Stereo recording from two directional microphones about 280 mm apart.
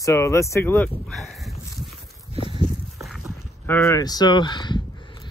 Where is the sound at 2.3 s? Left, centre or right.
Centre.